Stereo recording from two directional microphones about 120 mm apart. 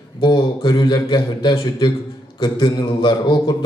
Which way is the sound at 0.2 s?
40° left (ahead or behind).